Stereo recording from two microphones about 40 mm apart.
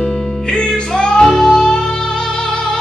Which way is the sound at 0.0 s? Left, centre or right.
Centre.